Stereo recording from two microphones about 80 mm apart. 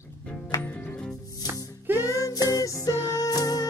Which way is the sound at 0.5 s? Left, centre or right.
Left.